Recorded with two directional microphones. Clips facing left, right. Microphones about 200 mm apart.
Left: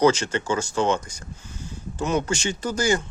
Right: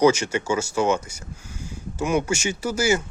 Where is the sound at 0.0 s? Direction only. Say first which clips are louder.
Right 1 dB; 10° right (ahead or behind).